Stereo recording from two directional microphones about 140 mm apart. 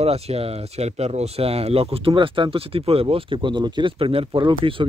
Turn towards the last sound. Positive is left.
turn(degrees=-40)  # may be behind; listen again after turning